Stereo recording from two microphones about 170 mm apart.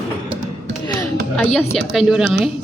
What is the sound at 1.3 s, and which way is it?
A woman's voice, centre (ahead or behind).